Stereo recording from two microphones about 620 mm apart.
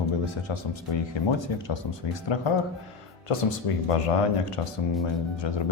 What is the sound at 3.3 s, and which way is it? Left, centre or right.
Speech, left.